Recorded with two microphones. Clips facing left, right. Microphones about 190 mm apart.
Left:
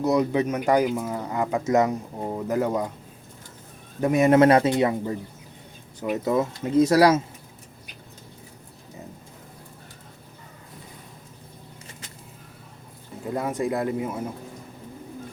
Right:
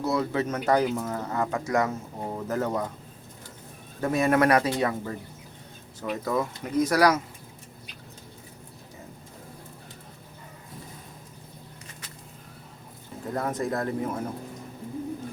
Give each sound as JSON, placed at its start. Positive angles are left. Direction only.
{"t": 0.0, "sound": "speech", "side_deg": 20}
{"t": 4.0, "sound": "speech", "side_deg": 20}
{"t": 13.2, "sound": "speech", "side_deg": 10}